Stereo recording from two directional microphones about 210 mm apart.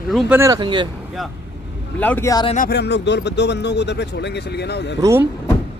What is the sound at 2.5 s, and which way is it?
Speech, 45° left (ahead or behind).